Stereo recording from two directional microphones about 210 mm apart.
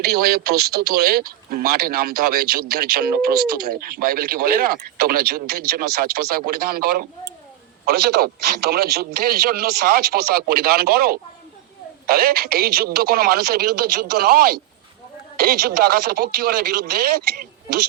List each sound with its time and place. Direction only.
0.0 s speech: 45° right (ahead or behind)